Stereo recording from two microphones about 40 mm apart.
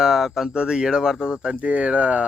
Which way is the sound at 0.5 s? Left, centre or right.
Right.